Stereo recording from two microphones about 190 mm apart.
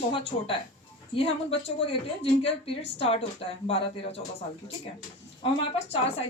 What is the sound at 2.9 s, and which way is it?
A woman's voice, 30° left (ahead or behind).